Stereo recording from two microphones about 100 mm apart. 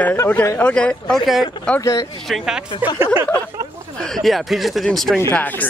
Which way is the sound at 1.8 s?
35° left (ahead or behind).